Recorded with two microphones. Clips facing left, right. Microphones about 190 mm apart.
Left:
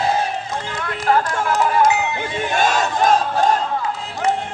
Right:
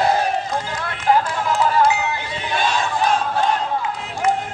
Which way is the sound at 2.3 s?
45° left (ahead or behind).